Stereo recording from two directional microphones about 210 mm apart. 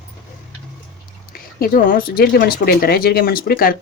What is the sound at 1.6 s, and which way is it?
Speech, 45° left (ahead or behind).